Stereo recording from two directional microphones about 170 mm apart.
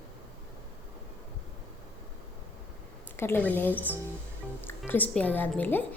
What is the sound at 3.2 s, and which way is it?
Speech, 10° left (ahead or behind).